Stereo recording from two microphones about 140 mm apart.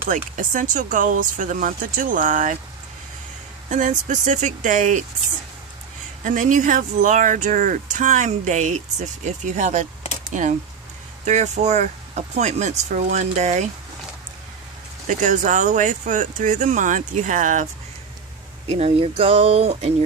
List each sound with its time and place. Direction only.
0.1 s speech: 70° right (ahead or behind)
3.7 s speech: 60° right (ahead or behind)
6.2 s speech: 65° right (ahead or behind)
15.0 s speech: 65° right (ahead or behind)
18.7 s speech: 50° right (ahead or behind)